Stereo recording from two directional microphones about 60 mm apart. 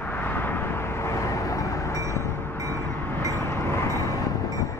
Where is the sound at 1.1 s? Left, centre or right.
Left.